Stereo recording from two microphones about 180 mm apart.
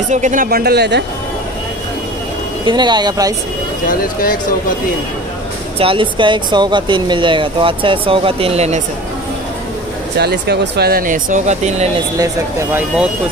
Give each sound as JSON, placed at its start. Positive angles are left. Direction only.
{"t": 0.1, "sound": "speech", "side_deg": -45}
{"t": 2.6, "sound": "speech", "side_deg": -25}
{"t": 3.8, "sound": "speech", "side_deg": 50}
{"t": 5.8, "sound": "speech", "side_deg": -30}
{"t": 10.1, "sound": "speech", "side_deg": -65}
{"t": 12.7, "sound": "speech", "side_deg": -5}